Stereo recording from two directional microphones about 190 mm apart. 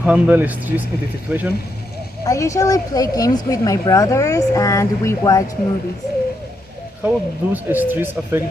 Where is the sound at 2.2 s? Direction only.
15° left (ahead or behind).